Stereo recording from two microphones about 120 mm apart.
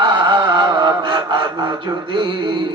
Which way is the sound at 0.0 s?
40° right (ahead or behind).